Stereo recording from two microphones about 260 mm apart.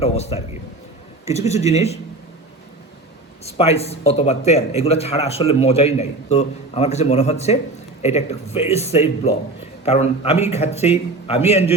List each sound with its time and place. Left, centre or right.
0.0 s a man's voice: left
3.6 s a man's voice: left